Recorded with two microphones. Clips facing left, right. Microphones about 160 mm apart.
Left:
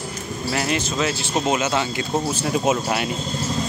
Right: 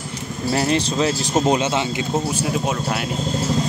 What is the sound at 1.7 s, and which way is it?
Speech, 20° right (ahead or behind).